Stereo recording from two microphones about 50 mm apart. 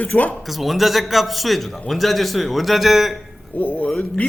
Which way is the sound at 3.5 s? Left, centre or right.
Left.